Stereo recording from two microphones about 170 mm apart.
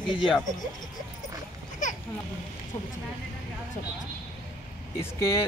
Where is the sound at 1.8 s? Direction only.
45° left (ahead or behind).